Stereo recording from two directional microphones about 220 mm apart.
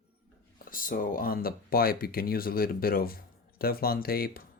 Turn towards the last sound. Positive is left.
turn(degrees=45)  # may be behind; listen again after turning